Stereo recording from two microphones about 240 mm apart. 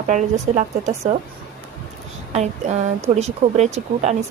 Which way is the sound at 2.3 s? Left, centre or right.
Right.